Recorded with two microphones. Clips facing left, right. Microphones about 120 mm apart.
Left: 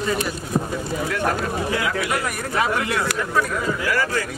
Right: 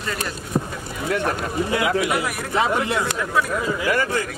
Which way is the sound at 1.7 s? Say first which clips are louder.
Right 6 dB; 20° right (ahead or behind).